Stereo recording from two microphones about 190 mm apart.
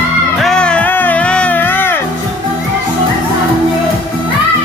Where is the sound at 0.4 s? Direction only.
5° left (ahead or behind).